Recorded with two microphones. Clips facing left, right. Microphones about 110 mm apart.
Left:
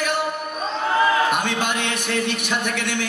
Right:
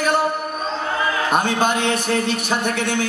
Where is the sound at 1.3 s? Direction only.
35° right (ahead or behind).